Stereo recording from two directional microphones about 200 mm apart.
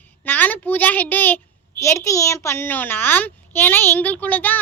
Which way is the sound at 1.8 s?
15° left (ahead or behind).